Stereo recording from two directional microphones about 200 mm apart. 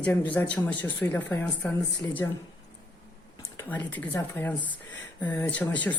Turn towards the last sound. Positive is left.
turn(degrees=10)  # may be behind; listen again after turning